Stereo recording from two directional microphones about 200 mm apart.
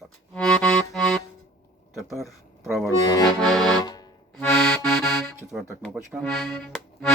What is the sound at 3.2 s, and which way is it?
Accordion, centre (ahead or behind).